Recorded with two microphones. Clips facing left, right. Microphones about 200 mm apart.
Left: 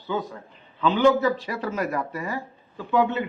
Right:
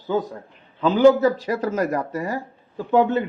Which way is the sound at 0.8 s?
40° right (ahead or behind).